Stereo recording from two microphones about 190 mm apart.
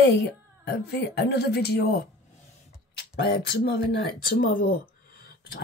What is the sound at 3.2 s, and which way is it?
Speech, 55° left (ahead or behind).